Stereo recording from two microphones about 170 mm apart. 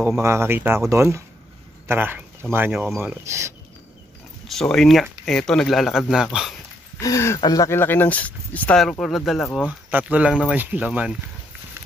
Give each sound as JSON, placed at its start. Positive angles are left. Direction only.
{"t": 0.0, "sound": "speech", "side_deg": -15}
{"t": 4.5, "sound": "speech", "side_deg": 5}
{"t": 7.0, "sound": "speech", "side_deg": 15}
{"t": 9.7, "sound": "speech", "side_deg": -10}